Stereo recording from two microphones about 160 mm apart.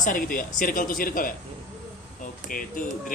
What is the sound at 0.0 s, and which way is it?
A woman's voice, 60° left (ahead or behind).